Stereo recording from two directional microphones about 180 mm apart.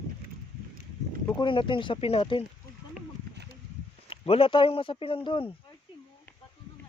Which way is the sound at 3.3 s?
65° right (ahead or behind).